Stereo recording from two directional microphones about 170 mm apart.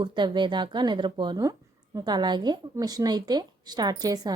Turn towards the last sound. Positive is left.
turn(degrees=-25)  # may be behind; listen again after turning